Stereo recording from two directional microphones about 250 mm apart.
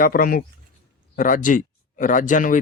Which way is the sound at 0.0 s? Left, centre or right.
Left.